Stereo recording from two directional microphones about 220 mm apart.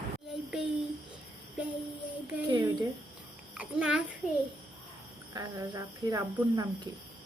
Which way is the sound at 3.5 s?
5° right (ahead or behind).